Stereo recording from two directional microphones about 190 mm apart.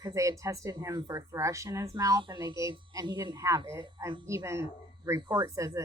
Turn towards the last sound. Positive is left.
turn(degrees=-15)  # may be behind; listen again after turning